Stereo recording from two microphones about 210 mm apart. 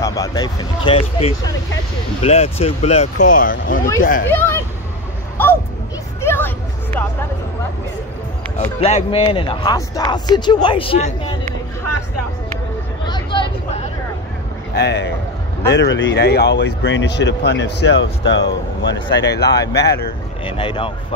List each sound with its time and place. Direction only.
0.0 s speech: 15° left (ahead or behind); by 3.8 s 40° left (ahead or behind)
4.3 s speech: 10° left (ahead or behind)
6.2 s hubbub: 10° left (ahead or behind)
8.5 s speech: 30° left (ahead or behind)
13.1 s vehicle: 25° left (ahead or behind)
14.8 s a man's voice: 55° left (ahead or behind)
20.4 s speech: 25° left (ahead or behind)